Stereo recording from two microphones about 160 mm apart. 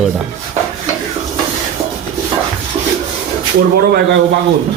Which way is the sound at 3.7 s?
80° right.